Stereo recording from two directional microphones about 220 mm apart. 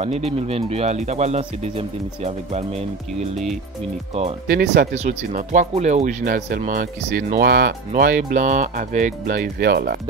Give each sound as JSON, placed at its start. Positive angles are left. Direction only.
{"t": 0.0, "sound": "speech", "side_deg": -30}
{"t": 4.5, "sound": "speech", "side_deg": -45}
{"t": 4.9, "sound": "speech", "side_deg": -35}